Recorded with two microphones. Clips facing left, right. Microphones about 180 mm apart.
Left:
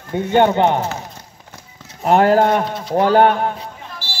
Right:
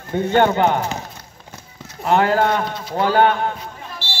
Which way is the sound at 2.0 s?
35° left (ahead or behind).